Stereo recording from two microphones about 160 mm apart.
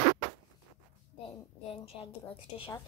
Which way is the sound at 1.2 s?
35° left (ahead or behind).